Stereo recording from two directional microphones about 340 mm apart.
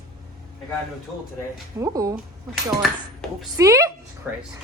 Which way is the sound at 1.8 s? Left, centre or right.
Centre.